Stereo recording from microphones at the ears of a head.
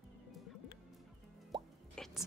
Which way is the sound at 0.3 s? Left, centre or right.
Left.